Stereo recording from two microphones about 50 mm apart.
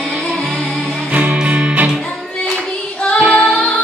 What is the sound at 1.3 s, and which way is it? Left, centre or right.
Music, right.